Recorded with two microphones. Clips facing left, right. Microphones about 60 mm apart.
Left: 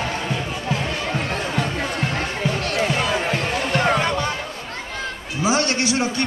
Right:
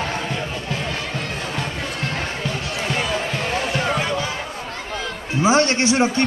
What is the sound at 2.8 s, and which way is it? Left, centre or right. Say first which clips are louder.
Basketball bounce: left 1 dB; centre.